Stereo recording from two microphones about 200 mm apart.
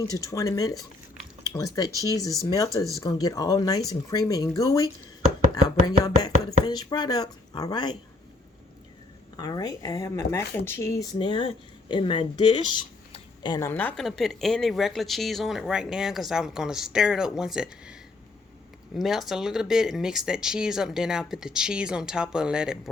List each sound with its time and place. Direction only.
0.0 s speech: 15° left (ahead or behind)
6.2 s speech: 20° left (ahead or behind)
9.4 s speech: 20° left (ahead or behind); by 17.9 s 5° right (ahead or behind)
18.9 s speech: centre (ahead or behind)